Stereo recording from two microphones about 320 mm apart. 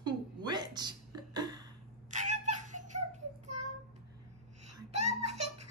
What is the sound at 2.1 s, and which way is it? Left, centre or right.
Child singing, right.